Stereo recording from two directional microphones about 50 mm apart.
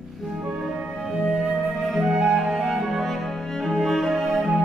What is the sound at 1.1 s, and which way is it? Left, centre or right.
Flute, centre.